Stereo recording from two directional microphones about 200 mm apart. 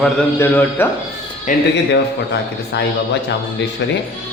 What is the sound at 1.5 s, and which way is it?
Speech, 40° left (ahead or behind).